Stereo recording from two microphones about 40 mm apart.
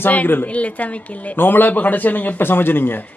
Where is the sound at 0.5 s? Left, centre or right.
Left.